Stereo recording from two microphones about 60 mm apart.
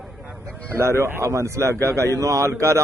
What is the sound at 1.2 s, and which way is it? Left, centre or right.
A man's voice, right.